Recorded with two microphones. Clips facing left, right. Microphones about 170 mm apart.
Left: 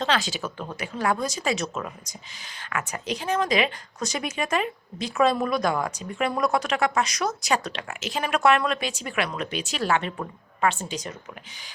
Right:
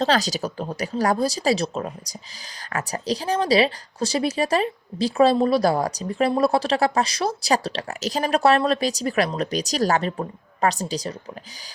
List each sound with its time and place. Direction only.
0.0 s a woman's voice: 40° right (ahead or behind)